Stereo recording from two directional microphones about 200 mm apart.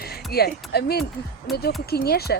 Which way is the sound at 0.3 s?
50° left (ahead or behind).